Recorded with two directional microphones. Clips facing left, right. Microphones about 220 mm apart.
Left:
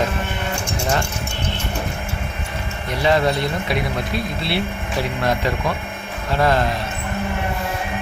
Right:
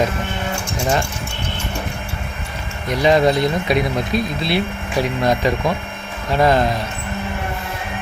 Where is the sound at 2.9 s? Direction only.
15° right (ahead or behind).